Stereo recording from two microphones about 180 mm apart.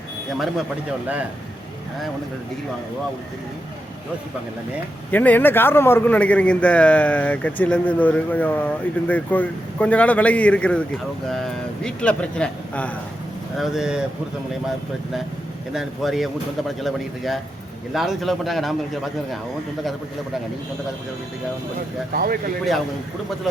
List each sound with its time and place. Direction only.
5.1 s a man's voice: 10° left (ahead or behind)
13.6 s speech: 5° right (ahead or behind)
15.7 s speech: centre (ahead or behind)
22.1 s speech: 55° right (ahead or behind)